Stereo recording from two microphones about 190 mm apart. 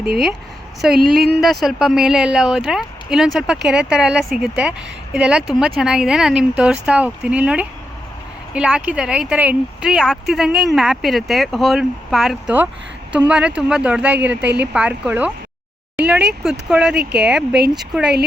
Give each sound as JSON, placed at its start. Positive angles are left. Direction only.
{"t": 1.1, "sound": "speech", "side_deg": 0}
{"t": 17.0, "sound": "speech", "side_deg": -60}
{"t": 17.7, "sound": "speech", "side_deg": -5}